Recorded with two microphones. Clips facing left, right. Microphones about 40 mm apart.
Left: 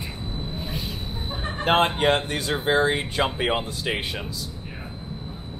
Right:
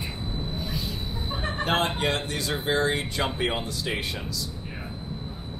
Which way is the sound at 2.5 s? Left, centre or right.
Left.